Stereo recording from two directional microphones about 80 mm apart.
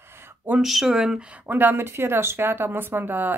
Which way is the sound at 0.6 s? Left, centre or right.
Centre.